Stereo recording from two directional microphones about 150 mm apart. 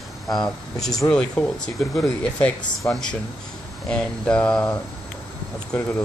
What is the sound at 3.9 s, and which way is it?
Speech, 5° left (ahead or behind).